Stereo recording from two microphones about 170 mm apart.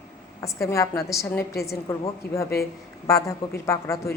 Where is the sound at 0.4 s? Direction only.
20° left (ahead or behind).